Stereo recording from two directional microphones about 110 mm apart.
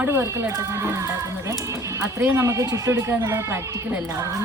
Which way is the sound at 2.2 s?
25° right (ahead or behind).